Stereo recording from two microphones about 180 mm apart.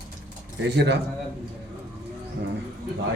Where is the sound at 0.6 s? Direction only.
75° right (ahead or behind).